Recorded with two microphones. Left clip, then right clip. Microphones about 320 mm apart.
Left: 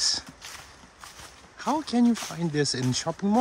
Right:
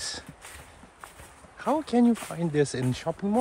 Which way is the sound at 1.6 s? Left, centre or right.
Centre.